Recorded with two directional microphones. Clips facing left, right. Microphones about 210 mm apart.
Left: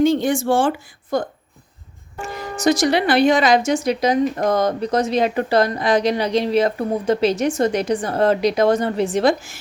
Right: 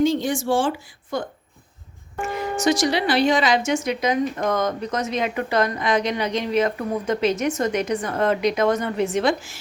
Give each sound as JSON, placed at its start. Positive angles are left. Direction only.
{"t": 0.0, "sound": "speech", "side_deg": 60}
{"t": 1.1, "sound": "a woman's voice", "side_deg": 40}
{"t": 2.3, "sound": "a woman's voice", "side_deg": 40}
{"t": 2.8, "sound": "a woman's voice", "side_deg": 55}